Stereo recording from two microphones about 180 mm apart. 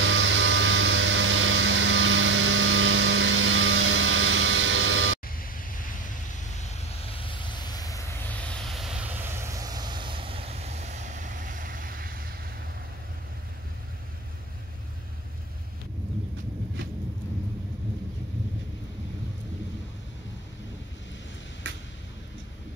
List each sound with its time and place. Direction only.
0.0 s vehicle: 90° right
5.4 s waves: 50° left (ahead or behind)
6.6 s vehicle: 30° left (ahead or behind)
8.3 s vehicle: 5° left (ahead or behind); by 12.3 s 55° right (ahead or behind)
21.7 s a sound: 85° right